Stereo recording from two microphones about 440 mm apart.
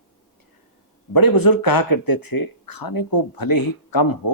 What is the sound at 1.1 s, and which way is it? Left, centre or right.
Speech, left.